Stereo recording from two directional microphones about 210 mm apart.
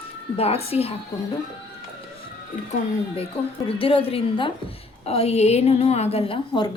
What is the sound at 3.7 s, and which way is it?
A woman's voice, 25° left (ahead or behind).